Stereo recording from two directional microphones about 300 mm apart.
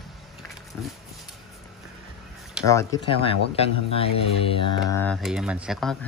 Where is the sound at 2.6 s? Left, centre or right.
Centre.